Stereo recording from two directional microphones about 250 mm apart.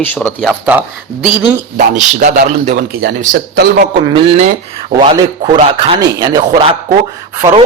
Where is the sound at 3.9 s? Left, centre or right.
Centre.